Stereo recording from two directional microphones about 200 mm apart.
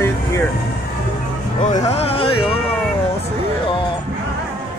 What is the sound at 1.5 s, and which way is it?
Speech, 40° left (ahead or behind).